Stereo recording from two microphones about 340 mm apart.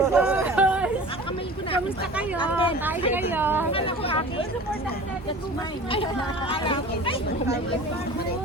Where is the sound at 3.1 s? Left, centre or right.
Centre.